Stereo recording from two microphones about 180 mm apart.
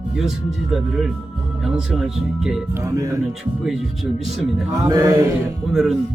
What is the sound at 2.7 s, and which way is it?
Speech, 15° right (ahead or behind).